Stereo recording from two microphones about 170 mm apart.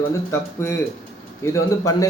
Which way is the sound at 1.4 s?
20° left (ahead or behind).